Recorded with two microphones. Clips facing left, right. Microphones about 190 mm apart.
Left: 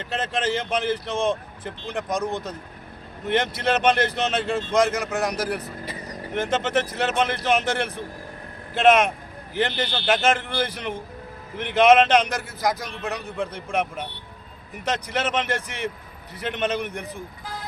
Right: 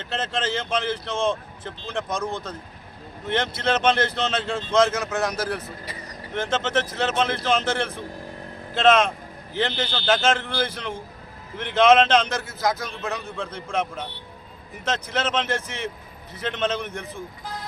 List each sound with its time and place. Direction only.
0.0 s a man's voice: 15° left (ahead or behind)